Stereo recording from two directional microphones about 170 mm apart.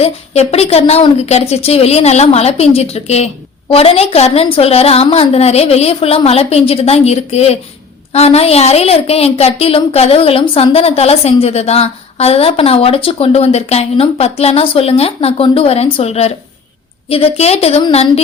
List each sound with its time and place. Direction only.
0.0 s a woman's voice: 35° left (ahead or behind)